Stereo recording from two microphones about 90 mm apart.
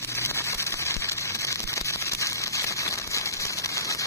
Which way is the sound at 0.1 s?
30° left (ahead or behind).